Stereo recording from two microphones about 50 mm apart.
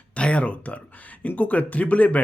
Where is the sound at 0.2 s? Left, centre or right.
Left.